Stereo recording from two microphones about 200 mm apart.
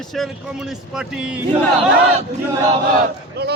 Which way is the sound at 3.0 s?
55° right (ahead or behind).